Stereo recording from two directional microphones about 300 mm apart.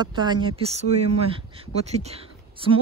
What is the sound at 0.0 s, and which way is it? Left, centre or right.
Speech, centre.